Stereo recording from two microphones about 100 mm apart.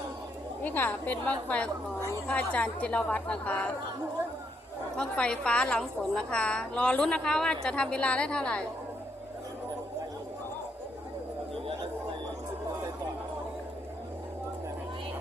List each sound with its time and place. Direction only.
0.6 s a woman's voice: 20° left (ahead or behind)
4.9 s a woman's voice: 10° left (ahead or behind)